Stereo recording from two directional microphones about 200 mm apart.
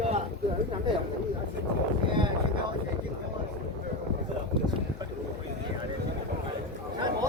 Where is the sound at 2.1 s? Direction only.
25° right (ahead or behind).